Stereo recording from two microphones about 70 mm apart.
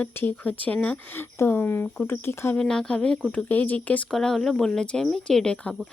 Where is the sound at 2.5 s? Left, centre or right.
Centre.